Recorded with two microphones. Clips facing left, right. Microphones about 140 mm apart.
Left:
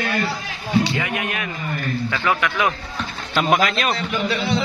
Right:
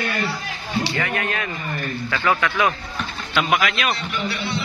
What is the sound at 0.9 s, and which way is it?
Speech, 10° left (ahead or behind).